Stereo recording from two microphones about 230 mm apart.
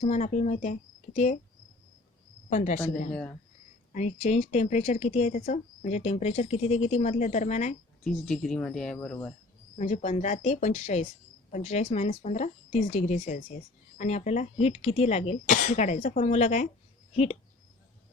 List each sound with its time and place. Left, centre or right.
0.0 s speech: left
2.5 s speech: left
3.1 s speech: centre
3.9 s speech: left
8.0 s speech: centre
9.7 s speech: left